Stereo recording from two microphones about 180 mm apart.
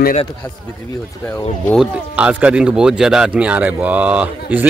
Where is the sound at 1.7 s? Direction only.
5° right (ahead or behind).